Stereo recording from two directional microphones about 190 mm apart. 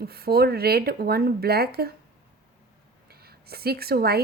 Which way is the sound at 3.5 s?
55° right (ahead or behind).